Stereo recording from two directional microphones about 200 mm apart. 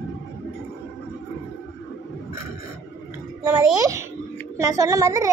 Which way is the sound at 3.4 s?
15° right (ahead or behind).